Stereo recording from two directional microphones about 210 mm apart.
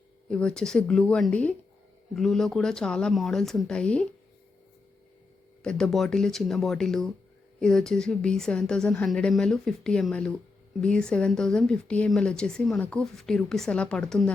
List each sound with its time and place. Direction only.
0.3 s speech: 5° left (ahead or behind)
5.6 s speech: 5° left (ahead or behind)